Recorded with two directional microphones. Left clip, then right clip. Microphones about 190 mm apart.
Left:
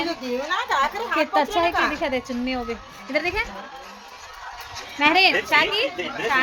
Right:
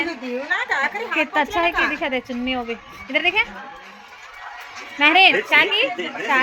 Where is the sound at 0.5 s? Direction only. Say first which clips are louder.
Right 1 dB; 50° left (ahead or behind).